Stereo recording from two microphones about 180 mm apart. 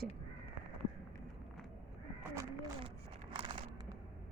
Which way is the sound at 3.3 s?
25° right (ahead or behind).